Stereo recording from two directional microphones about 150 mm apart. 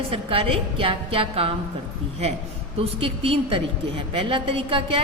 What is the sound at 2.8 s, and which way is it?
A woman's voice, 40° right (ahead or behind).